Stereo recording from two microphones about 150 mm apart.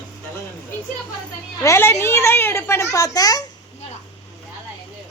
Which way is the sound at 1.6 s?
20° left (ahead or behind).